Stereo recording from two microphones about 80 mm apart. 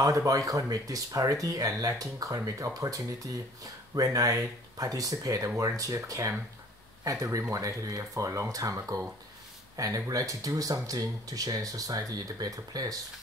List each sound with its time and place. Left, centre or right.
0.0 s speech: right